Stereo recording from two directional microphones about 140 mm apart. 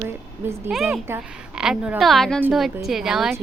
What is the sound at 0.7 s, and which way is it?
A woman's voice, centre (ahead or behind).